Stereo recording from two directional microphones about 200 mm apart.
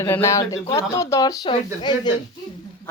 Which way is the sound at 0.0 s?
15° left (ahead or behind).